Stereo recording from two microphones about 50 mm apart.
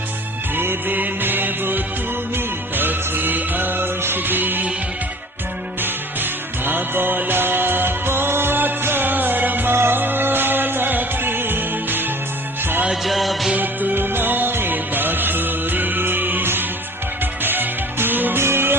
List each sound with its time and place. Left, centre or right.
0.5 s music: right
5.8 s music: right
12.9 s music: centre
13.6 s music: right
18.3 s music: right